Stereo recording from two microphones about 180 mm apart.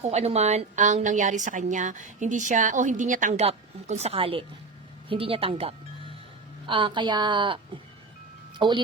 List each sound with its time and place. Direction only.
0.0 s a woman's voice: 35° right (ahead or behind)